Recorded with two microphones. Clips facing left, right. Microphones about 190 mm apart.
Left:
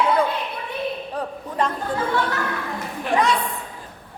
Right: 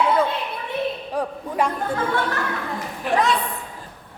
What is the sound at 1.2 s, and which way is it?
Speech, 10° right (ahead or behind).